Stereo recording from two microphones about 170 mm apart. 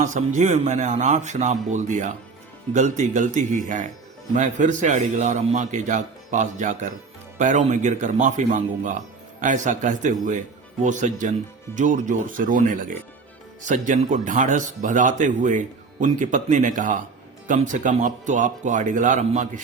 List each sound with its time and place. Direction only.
0.0 s speech: 45° right (ahead or behind)